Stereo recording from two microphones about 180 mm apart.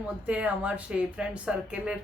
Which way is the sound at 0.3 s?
10° right (ahead or behind).